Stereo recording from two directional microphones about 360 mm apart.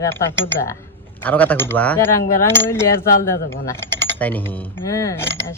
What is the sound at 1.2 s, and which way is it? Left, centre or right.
Speech, centre.